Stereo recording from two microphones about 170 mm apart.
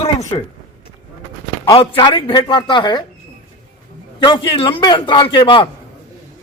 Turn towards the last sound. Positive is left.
turn(degrees=30)  # may be behind; listen again after turning